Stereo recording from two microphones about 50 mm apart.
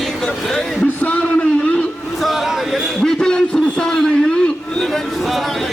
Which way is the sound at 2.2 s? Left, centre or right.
Centre.